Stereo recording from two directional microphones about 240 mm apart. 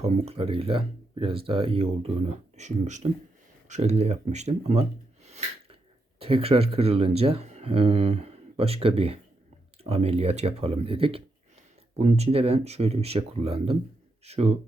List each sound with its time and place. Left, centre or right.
0.0 s speech: right